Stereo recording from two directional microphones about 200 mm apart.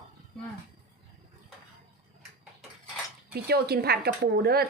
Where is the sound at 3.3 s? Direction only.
50° right (ahead or behind).